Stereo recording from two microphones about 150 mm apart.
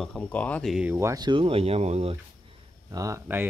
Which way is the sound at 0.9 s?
20° right (ahead or behind).